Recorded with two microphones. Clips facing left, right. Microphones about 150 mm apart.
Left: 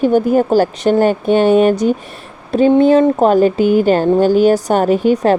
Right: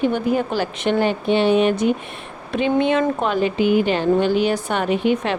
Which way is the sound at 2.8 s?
35° left (ahead or behind).